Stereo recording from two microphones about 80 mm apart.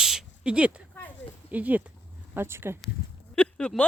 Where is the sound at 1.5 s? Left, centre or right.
Centre.